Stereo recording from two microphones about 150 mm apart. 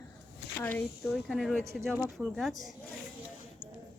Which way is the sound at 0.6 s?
15° left (ahead or behind).